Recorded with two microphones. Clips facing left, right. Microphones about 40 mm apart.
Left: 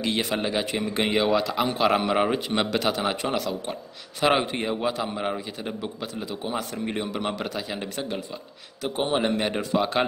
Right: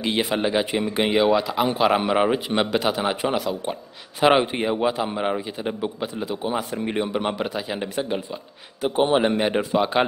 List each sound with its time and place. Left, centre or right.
0.0 s a man's voice: centre